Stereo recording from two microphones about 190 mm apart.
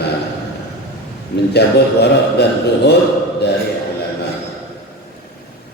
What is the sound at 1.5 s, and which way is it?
A man's voice, 60° left (ahead or behind).